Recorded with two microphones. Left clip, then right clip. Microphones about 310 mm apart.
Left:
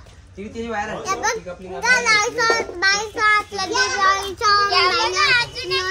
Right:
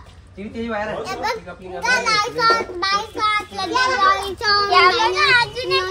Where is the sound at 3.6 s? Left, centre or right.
Centre.